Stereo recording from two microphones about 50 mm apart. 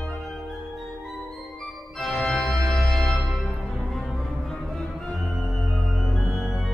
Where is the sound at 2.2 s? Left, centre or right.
Centre.